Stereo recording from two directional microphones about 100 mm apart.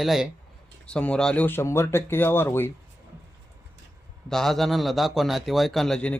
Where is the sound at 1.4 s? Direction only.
25° left (ahead or behind).